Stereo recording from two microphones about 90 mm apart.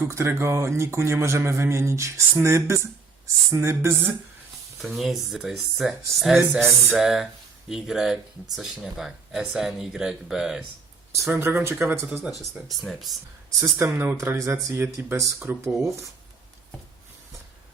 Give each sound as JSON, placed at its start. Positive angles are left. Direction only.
{"t": 0.1, "sound": "a man's voice", "side_deg": -30}
{"t": 4.8, "sound": "speech", "side_deg": 0}
{"t": 11.3, "sound": "speech", "side_deg": -25}
{"t": 12.8, "sound": "speech", "side_deg": 0}
{"t": 13.7, "sound": "a man's voice", "side_deg": -25}